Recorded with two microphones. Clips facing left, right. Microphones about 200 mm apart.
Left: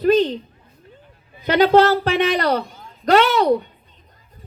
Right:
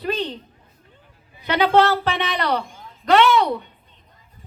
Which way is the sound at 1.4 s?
40° left (ahead or behind).